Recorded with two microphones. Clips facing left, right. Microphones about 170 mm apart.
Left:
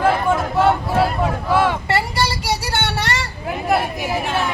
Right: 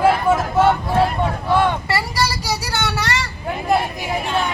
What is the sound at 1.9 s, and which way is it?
Child singing, 25° left (ahead or behind).